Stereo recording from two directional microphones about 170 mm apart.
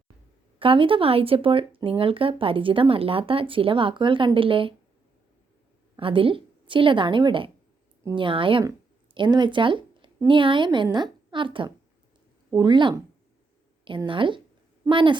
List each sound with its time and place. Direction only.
0.6 s speech: 30° right (ahead or behind)
6.0 s a woman's voice: 30° right (ahead or behind)
14.1 s a woman's voice: 30° right (ahead or behind)